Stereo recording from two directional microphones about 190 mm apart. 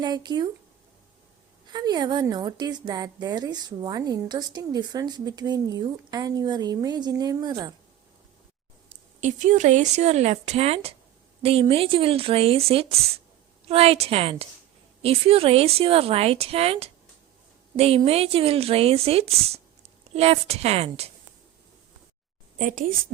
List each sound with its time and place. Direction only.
0.0 s a woman's voice: 20° right (ahead or behind)
1.6 s a woman's voice: 20° right (ahead or behind)
9.2 s speech: 40° right (ahead or behind)
22.5 s a woman's voice: 45° right (ahead or behind)